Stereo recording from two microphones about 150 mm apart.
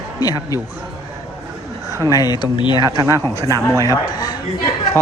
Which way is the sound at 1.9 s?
20° right (ahead or behind).